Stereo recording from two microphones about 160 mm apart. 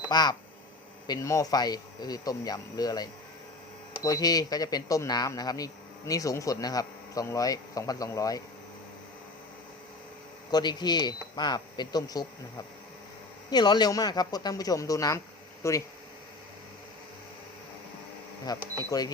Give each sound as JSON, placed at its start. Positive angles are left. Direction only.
{"t": 0.1, "sound": "speech", "side_deg": 25}
{"t": 10.5, "sound": "speech", "side_deg": 25}
{"t": 18.4, "sound": "speech", "side_deg": 25}